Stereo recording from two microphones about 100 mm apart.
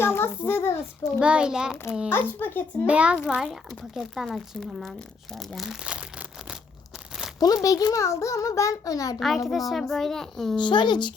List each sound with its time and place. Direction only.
0.0 s a child's voice: 25° left (ahead or behind)
1.2 s a child's voice: 10° right (ahead or behind)
2.0 s a child's voice: 20° left (ahead or behind)
2.8 s a child's voice: 10° right (ahead or behind)
5.8 s a sound: 10° right (ahead or behind)
7.3 s a child's voice: 40° left (ahead or behind)
9.1 s speech: centre (ahead or behind)
10.6 s speech: 50° left (ahead or behind)